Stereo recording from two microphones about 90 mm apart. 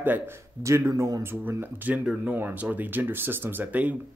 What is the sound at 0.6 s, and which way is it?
Speech, 35° right (ahead or behind).